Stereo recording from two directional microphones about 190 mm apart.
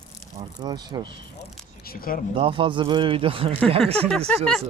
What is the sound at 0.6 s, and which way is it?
Speech, 20° right (ahead or behind).